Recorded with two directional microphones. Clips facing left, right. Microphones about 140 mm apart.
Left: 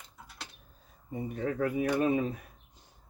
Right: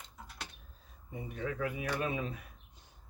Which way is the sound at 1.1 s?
40° left (ahead or behind).